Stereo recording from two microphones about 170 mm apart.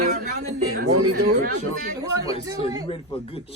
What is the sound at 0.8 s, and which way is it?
Speech, 70° right (ahead or behind).